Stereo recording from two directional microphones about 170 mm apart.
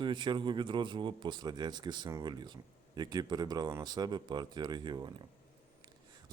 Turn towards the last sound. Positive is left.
turn(degrees=-25)  # may be behind; listen again after turning